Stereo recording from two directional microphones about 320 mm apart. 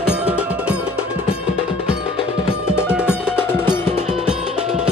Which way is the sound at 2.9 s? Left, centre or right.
Centre.